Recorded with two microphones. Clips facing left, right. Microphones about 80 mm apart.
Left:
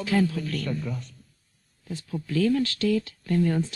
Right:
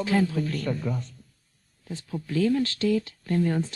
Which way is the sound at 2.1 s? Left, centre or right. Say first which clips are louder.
Even; centre.